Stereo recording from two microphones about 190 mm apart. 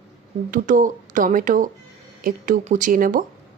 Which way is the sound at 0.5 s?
45° right (ahead or behind).